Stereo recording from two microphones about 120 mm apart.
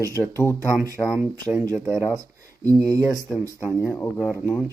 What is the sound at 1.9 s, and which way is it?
Speech, 30° right (ahead or behind).